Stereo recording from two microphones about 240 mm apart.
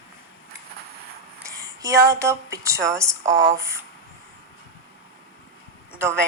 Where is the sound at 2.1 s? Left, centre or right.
Centre.